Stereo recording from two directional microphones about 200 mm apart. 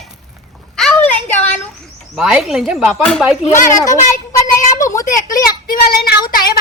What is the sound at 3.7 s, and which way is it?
Speech, 15° left (ahead or behind).